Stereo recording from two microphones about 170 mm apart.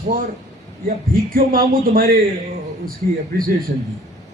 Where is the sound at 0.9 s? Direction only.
55° right (ahead or behind).